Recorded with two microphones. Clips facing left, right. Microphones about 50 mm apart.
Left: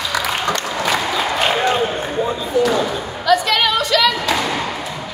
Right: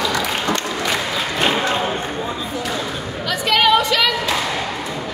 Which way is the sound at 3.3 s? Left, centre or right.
Centre.